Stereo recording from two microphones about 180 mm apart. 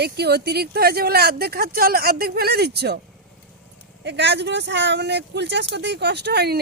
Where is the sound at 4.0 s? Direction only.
75° right (ahead or behind).